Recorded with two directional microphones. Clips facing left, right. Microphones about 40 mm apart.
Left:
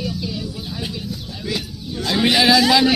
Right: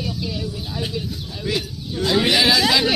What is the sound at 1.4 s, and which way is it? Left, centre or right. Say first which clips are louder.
Speech: right 2 dB; right.